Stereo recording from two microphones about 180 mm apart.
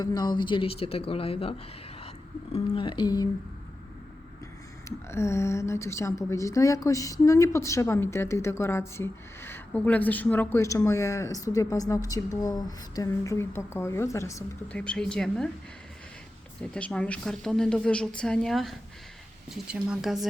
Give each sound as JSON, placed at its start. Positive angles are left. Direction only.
{"t": 0.0, "sound": "speech", "side_deg": 20}
{"t": 4.9, "sound": "a woman's voice", "side_deg": 15}
{"t": 14.7, "sound": "a woman's voice", "side_deg": 5}
{"t": 16.6, "sound": "a woman's voice", "side_deg": 5}